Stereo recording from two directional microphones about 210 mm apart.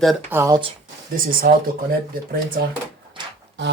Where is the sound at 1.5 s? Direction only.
45° right (ahead or behind).